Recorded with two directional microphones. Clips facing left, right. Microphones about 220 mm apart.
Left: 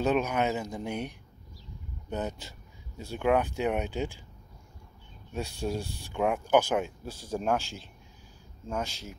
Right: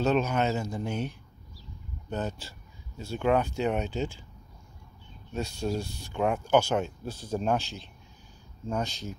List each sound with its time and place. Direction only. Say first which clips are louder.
0.0 s speech: right 1 dB; 15° left (ahead or behind)
5.3 s speech: right 2 dB; 15° left (ahead or behind)